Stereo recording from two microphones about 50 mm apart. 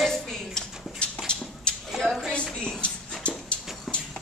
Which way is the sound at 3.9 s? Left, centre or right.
Centre.